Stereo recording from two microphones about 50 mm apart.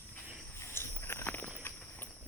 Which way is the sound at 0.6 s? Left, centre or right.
Left.